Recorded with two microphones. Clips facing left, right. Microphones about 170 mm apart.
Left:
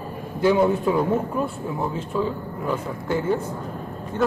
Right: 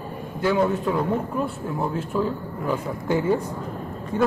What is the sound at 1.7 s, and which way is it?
Speech, 5° right (ahead or behind).